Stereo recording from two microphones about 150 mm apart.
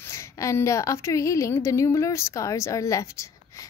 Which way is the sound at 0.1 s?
20° left (ahead or behind).